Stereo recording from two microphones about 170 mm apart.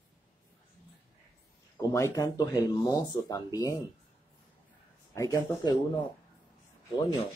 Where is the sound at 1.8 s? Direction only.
20° left (ahead or behind).